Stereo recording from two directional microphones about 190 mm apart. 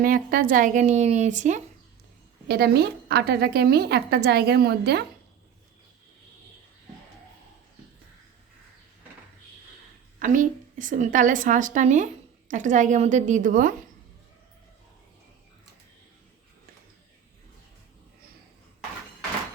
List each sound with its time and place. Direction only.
0.0 s speech: 45° right (ahead or behind)
2.5 s a woman's voice: 55° right (ahead or behind)
10.2 s a woman's voice: 45° right (ahead or behind)